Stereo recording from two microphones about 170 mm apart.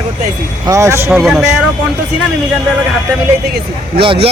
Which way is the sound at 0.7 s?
15° right (ahead or behind).